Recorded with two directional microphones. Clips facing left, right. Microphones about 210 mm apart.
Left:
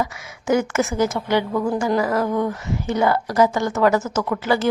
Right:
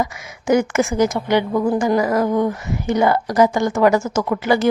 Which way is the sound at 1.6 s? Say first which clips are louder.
Right 4 dB; 20° right (ahead or behind).